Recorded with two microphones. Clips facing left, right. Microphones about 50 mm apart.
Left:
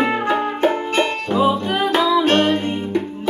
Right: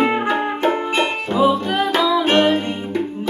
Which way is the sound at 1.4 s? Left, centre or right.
Centre.